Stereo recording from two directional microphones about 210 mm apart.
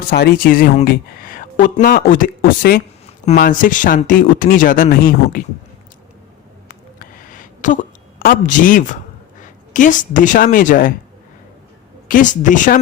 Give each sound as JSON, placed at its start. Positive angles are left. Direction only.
{"t": 0.1, "sound": "speech", "side_deg": 50}
{"t": 6.7, "sound": "a sound", "side_deg": 40}
{"t": 9.4, "sound": "a woman's voice", "side_deg": 40}
{"t": 12.0, "sound": "speech", "side_deg": 40}